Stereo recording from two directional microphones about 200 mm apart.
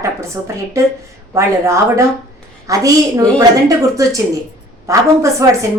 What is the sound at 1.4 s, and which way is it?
A woman's voice, 15° right (ahead or behind).